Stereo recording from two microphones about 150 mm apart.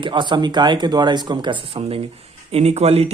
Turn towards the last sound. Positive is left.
turn(degrees=-45)  # may be behind; listen again after turning